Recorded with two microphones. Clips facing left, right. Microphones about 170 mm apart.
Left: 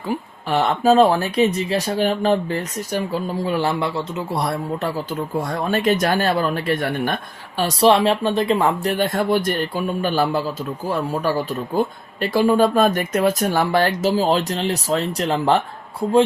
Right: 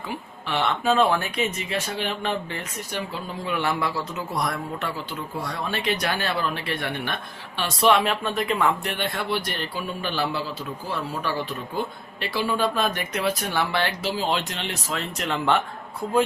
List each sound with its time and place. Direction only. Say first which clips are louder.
0.1 s speech: left 8 dB; 40° left (ahead or behind)